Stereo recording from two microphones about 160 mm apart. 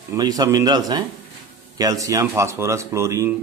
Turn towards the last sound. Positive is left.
turn(degrees=-20)  # may be behind; listen again after turning